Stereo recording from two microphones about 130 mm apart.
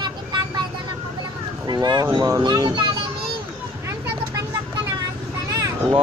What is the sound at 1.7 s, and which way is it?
A child's voice, 30° right (ahead or behind).